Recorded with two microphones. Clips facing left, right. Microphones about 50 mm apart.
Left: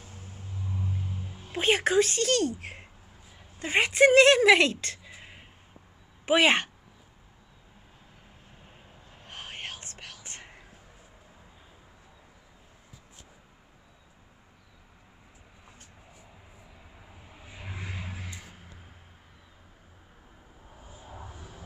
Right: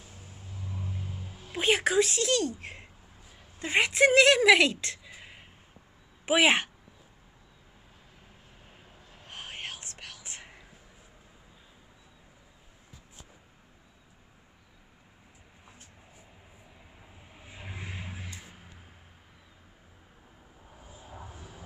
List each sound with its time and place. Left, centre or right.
0.0 s vehicle: left
1.0 s music: left
1.6 s speech: centre
5.1 s a sound: centre
6.2 s speech: centre
8.6 s vehicle: centre
9.2 s whispering: centre
20.8 s vehicle: left
21.1 s vehicle: centre
21.4 s vehicle: centre